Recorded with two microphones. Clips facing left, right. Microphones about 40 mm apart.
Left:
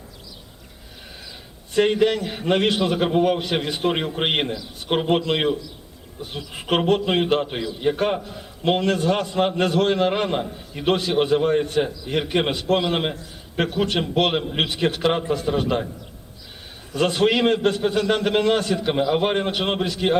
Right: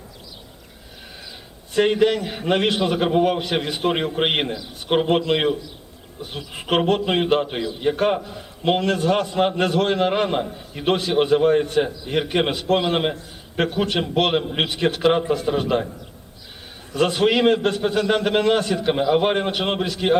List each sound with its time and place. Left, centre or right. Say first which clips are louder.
1.7 s a man's voice: right 1 dB; centre
16.9 s a man's voice: right 1 dB; centre